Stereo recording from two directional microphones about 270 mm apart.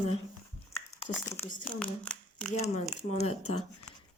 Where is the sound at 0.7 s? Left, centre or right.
Centre.